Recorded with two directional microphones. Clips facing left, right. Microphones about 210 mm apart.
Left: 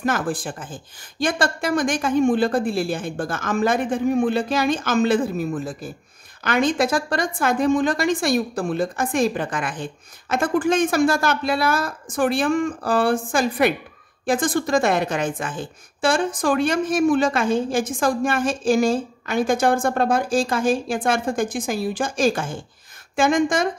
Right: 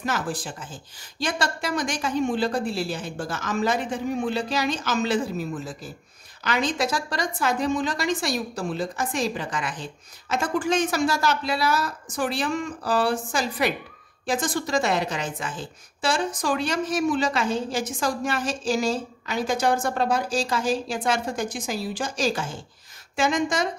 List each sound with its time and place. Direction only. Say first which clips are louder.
0.0 s a woman's voice: left 5 dB; 55° left (ahead or behind)